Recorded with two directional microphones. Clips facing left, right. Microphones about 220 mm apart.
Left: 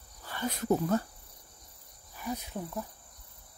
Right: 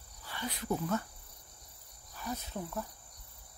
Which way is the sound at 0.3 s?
45° left (ahead or behind).